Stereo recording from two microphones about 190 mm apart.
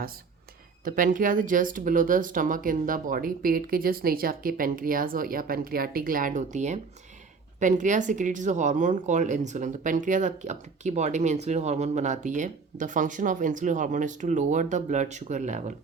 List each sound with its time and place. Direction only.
0.9 s speech: 45° right (ahead or behind)